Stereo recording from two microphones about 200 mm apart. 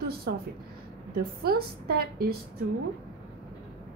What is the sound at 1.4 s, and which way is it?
Speech, 50° right (ahead or behind).